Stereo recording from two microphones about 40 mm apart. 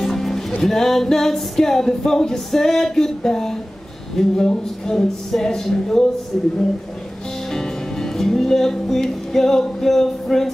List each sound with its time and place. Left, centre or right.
0.0 s music: centre
6.3 s speech: centre
7.5 s music: centre